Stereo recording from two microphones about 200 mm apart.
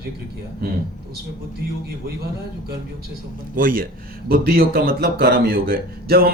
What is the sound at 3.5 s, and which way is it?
A man's voice, 45° right (ahead or behind).